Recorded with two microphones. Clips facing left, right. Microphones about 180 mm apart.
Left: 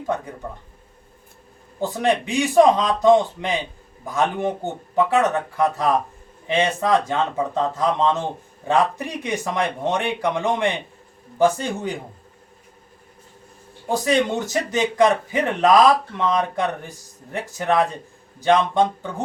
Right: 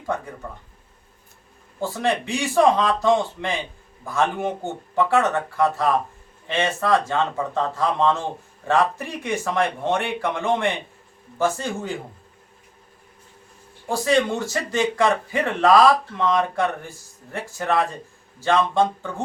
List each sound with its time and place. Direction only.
1.8 s speech: 20° left (ahead or behind)
13.8 s speech: 20° left (ahead or behind)